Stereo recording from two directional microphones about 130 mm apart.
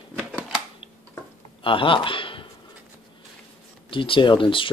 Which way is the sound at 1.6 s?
40° left (ahead or behind).